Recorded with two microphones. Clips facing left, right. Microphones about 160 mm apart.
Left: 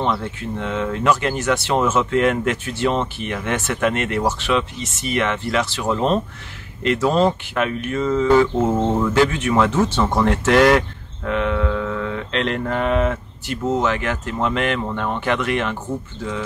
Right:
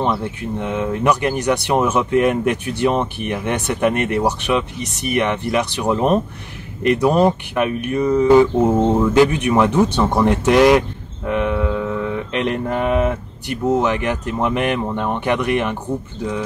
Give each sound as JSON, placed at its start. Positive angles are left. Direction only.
{"t": 0.0, "sound": "speech", "side_deg": -15}
{"t": 11.2, "sound": "mantra", "side_deg": -15}